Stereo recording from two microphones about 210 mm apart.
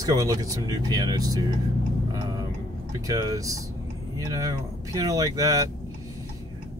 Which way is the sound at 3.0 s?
15° right (ahead or behind).